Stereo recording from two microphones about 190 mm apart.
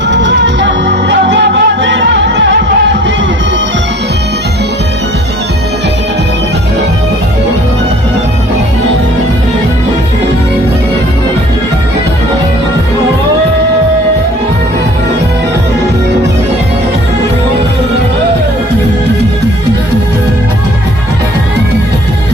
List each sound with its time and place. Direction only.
0.1 s music: 70° right (ahead or behind)